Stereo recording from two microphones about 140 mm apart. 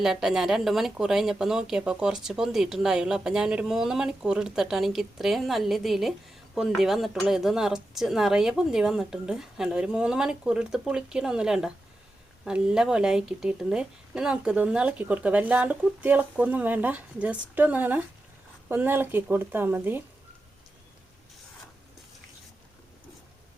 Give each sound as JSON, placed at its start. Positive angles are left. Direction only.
{"t": 0.0, "sound": "a woman's voice", "side_deg": -5}